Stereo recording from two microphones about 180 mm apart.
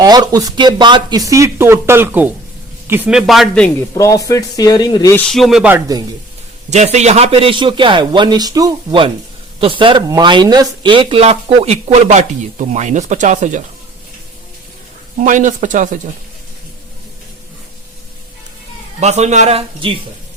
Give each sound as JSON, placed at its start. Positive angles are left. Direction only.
{"t": 0.0, "sound": "a man's voice", "side_deg": -20}
{"t": 3.8, "sound": "speech", "side_deg": 15}
{"t": 5.1, "sound": "speech", "side_deg": 5}
{"t": 5.7, "sound": "a man's voice", "side_deg": -20}
{"t": 6.7, "sound": "a man's voice", "side_deg": -40}
{"t": 15.2, "sound": "speech", "side_deg": -45}
{"t": 18.9, "sound": "speech", "side_deg": -40}